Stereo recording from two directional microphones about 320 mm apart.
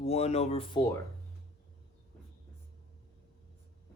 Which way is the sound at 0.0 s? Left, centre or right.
Centre.